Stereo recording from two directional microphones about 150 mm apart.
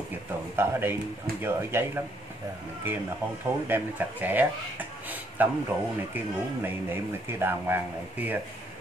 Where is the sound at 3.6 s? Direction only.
15° right (ahead or behind).